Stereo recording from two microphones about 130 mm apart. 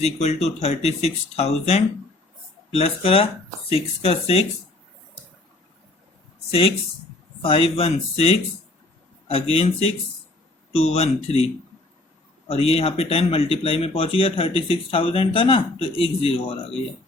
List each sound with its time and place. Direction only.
0.0 s speech: 55° left (ahead or behind)
7.4 s speech: 45° left (ahead or behind)
12.5 s speech: 50° left (ahead or behind)